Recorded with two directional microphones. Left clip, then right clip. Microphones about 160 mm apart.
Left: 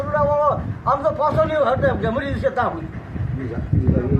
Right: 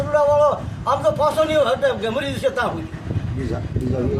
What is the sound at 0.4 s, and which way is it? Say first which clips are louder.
Speech: right 1 dB; 25° right (ahead or behind).